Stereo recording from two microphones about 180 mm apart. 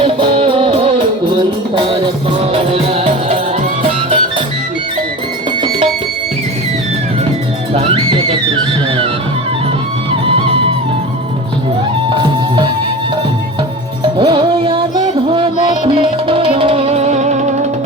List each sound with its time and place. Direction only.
0.0 s music: 30° right (ahead or behind)
7.7 s music: 30° right (ahead or behind)
12.0 s music: 25° right (ahead or behind)
14.0 s music: 25° right (ahead or behind)